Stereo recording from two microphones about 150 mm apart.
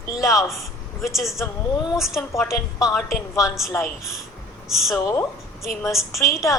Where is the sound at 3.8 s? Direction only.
Centre (ahead or behind).